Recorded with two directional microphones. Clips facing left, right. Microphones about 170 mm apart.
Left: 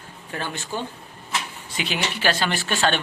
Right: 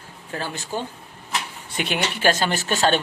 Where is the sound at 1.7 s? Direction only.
55° right (ahead or behind).